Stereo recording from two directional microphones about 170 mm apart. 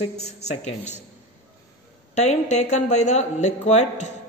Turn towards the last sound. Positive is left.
turn(degrees=45)  # may be behind; listen again after turning